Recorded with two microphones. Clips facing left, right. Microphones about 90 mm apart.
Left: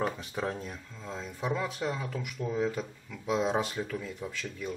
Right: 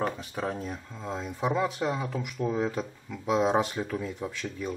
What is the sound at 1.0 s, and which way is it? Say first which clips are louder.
Speech: right 4 dB; 40° right (ahead or behind).